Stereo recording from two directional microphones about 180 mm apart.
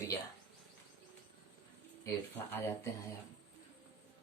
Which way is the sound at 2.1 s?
15° left (ahead or behind).